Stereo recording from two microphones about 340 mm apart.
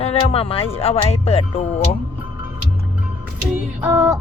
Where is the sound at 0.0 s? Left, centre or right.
Centre.